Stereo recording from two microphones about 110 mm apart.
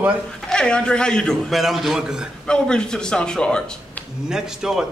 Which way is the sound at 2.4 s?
10° left (ahead or behind).